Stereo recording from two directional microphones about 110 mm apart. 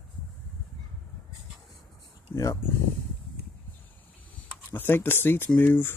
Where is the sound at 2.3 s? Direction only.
20° left (ahead or behind).